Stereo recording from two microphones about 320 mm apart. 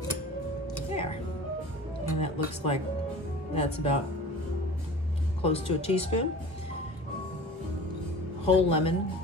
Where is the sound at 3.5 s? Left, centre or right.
Centre.